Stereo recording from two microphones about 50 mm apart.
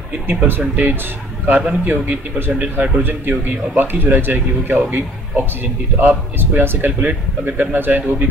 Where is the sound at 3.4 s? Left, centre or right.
Right.